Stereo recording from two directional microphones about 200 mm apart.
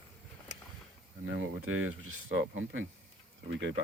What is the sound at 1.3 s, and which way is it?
Speech, 90° right.